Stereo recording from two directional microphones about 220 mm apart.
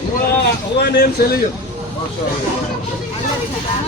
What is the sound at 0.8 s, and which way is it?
Speech, 45° left (ahead or behind).